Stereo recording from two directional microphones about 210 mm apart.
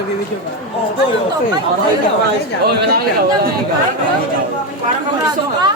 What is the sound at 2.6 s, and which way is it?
Speech, 50° right (ahead or behind).